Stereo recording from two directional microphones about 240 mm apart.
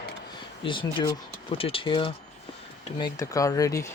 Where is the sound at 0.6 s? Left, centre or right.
Left.